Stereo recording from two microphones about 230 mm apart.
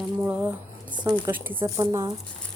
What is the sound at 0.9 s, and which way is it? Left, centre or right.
Speech, centre.